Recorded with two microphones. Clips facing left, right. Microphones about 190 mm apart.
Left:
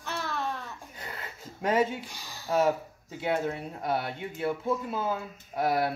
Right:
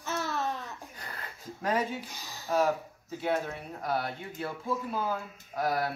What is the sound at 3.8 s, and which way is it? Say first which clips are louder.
Speech: left 1 dB; 25° left (ahead or behind).